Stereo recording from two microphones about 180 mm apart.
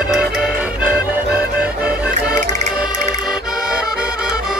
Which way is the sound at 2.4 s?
40° right (ahead or behind).